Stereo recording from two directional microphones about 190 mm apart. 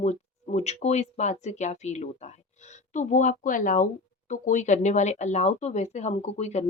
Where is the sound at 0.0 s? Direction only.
35° left (ahead or behind).